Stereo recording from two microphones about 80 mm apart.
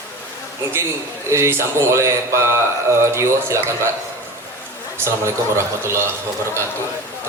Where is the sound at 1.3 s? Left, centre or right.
Right.